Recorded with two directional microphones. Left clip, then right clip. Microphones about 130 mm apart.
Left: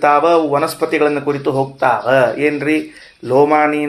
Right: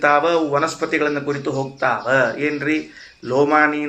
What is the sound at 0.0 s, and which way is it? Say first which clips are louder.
Speech: left 4 dB; 30° left (ahead or behind).